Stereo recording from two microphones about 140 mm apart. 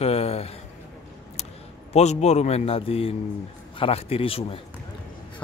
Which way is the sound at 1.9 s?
55° left (ahead or behind).